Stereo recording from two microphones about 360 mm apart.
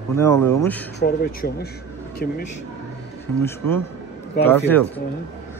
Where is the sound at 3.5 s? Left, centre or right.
Centre.